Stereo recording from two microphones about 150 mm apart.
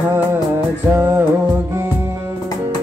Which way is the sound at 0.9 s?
15° right (ahead or behind).